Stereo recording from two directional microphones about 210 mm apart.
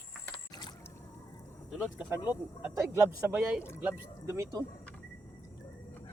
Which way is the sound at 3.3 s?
5° right (ahead or behind).